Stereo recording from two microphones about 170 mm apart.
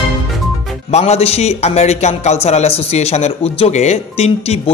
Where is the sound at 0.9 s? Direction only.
40° left (ahead or behind).